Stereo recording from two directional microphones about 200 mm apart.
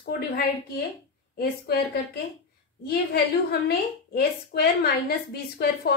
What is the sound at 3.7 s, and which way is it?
A woman's voice, 50° left (ahead or behind).